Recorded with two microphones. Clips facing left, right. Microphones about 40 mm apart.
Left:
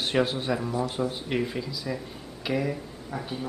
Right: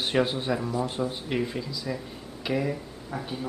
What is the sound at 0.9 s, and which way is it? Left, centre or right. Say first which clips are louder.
Speech: left 1 dB; centre.